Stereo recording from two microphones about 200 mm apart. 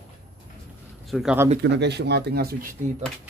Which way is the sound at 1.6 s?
60° right (ahead or behind).